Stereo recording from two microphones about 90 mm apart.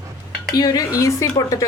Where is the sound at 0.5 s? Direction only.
45° left (ahead or behind).